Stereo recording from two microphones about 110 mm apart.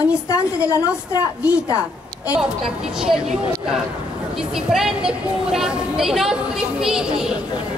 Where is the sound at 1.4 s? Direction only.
10° right (ahead or behind).